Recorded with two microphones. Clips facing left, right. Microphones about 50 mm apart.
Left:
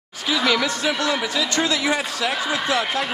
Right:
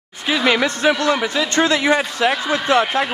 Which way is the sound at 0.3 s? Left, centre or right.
Right.